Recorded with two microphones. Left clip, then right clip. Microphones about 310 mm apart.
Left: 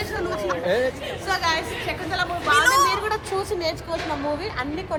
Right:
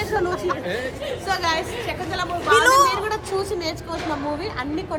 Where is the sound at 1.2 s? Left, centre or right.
Centre.